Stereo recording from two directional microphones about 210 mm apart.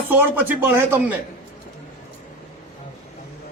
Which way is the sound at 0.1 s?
10° right (ahead or behind).